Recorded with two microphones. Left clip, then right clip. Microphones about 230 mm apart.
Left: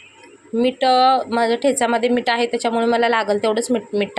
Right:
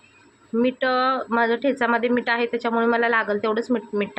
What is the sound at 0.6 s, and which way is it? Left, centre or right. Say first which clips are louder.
A woman's voice: left 6 dB; centre.